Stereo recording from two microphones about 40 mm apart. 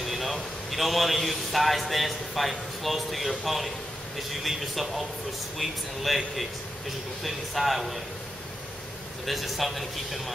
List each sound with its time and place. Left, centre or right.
0.0 s a man's voice: centre
9.2 s a man's voice: centre